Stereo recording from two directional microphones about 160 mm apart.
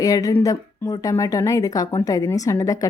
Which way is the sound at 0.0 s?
20° left (ahead or behind).